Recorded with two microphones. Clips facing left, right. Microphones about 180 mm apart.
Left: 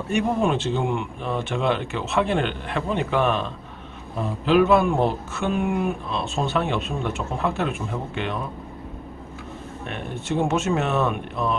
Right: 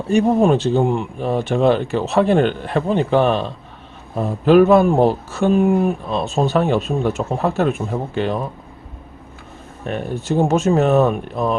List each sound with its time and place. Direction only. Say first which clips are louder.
0.1 s speech: right 8 dB; 35° right (ahead or behind)
9.8 s speech: right 7 dB; 40° right (ahead or behind)